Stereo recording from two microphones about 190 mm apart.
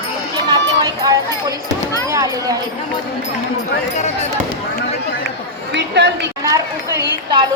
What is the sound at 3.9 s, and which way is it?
Speech, 35° left (ahead or behind).